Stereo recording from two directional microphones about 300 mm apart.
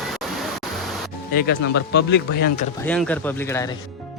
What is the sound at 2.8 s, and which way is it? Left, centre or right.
Speech, centre.